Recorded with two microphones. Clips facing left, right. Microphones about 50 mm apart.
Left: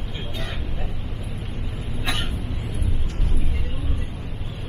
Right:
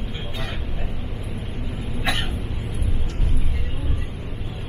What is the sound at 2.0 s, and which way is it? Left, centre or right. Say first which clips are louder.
Cough: right 2 dB; centre.